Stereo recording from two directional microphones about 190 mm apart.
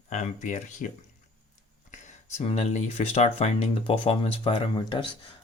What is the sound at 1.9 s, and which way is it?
Speech, 40° left (ahead or behind).